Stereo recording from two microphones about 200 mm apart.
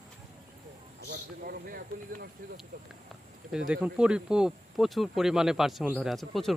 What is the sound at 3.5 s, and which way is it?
Speech, 5° right (ahead or behind).